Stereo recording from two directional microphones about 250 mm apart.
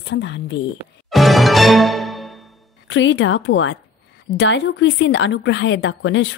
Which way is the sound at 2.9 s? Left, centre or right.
Left.